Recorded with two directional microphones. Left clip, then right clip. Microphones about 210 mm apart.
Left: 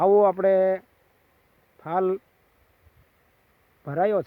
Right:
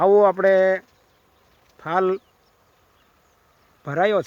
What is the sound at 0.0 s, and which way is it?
Speech, centre (ahead or behind).